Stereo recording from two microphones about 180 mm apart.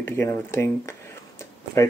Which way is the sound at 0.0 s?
15° left (ahead or behind).